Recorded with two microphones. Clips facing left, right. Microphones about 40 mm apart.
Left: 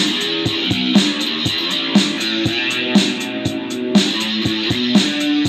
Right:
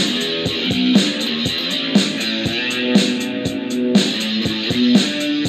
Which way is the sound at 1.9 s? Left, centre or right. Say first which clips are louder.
Left 2 dB; left.